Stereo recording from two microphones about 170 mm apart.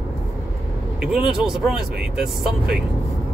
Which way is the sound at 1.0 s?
5° right (ahead or behind).